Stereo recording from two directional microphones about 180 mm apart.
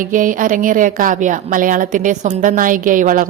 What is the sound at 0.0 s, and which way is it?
A woman's voice, 50° right (ahead or behind).